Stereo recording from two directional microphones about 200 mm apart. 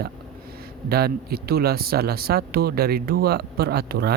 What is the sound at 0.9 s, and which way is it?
Speech, 50° right (ahead or behind).